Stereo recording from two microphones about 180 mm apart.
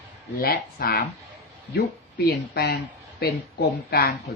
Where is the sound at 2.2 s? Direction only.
65° left (ahead or behind).